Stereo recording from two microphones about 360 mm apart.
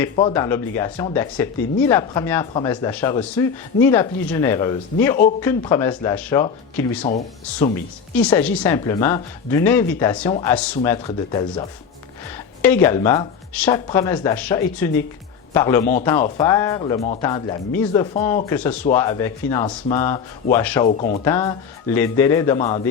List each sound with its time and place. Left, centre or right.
0.0 s speech: centre
8.1 s speech: centre
20.8 s speech: centre
21.2 s speech: centre